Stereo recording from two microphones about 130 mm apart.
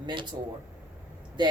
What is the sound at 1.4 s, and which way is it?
Speech, 35° right (ahead or behind).